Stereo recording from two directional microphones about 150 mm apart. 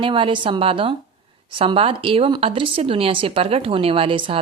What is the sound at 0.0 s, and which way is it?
Speech, 35° right (ahead or behind).